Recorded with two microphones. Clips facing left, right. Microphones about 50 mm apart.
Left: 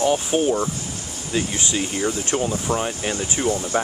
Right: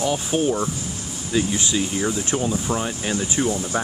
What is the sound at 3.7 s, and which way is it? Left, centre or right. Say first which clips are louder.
Speech: left 3 dB; left.